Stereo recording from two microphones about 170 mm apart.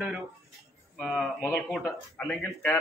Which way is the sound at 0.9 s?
5° right (ahead or behind).